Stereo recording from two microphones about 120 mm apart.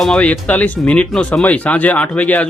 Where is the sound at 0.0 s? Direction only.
10° left (ahead or behind).